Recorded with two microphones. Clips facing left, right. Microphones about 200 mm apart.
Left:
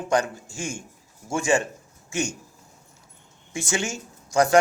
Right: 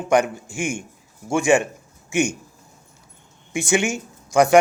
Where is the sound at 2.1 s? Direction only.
15° right (ahead or behind).